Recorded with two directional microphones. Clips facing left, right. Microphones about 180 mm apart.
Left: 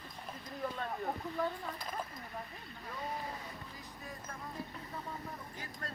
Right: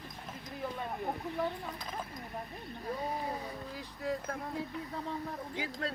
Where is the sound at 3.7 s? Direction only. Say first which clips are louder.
Right 12 dB; 75° right (ahead or behind).